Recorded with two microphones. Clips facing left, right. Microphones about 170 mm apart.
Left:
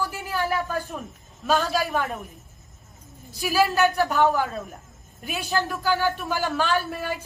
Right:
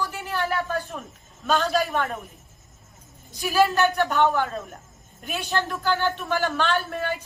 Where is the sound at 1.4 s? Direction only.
5° left (ahead or behind).